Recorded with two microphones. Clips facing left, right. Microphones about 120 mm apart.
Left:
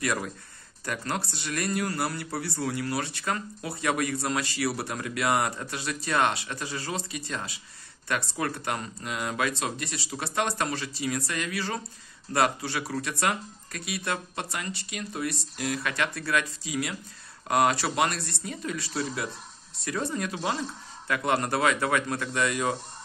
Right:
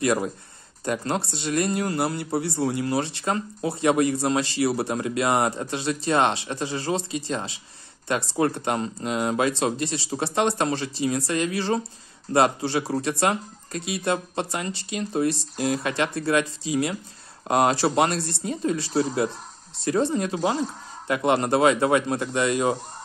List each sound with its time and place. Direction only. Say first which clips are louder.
0.0 s speech: right 7 dB; 25° right (ahead or behind)
20.4 s speech: right 6 dB; 40° right (ahead or behind)
21.1 s speech: right 5 dB; 25° right (ahead or behind)